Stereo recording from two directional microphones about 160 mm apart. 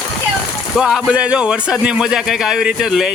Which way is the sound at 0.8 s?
5° right (ahead or behind).